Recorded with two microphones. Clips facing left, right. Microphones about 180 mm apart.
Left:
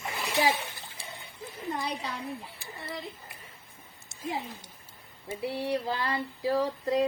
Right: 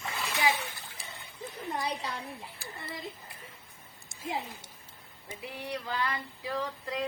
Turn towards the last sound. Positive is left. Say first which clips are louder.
# left 8 dB
turn(degrees=35)  # may be behind; listen again after turning